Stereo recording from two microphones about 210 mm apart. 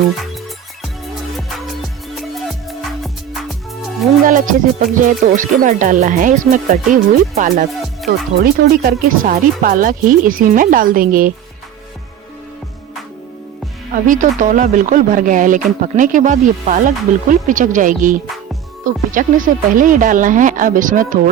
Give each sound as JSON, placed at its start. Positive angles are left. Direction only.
{"t": 1.4, "sound": "music", "side_deg": 0}
{"t": 4.2, "sound": "speech", "side_deg": -40}
{"t": 8.6, "sound": "speech", "side_deg": -45}
{"t": 13.9, "sound": "speech", "side_deg": -35}